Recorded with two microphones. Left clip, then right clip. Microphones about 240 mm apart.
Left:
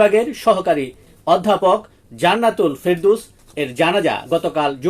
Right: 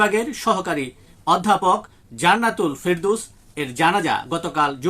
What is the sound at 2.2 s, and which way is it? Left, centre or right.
Speech, centre.